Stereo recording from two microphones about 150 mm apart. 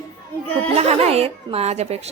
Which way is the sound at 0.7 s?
45° right (ahead or behind).